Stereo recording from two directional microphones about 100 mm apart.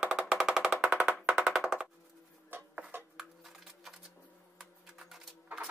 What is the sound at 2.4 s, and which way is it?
Dishes, 20° right (ahead or behind).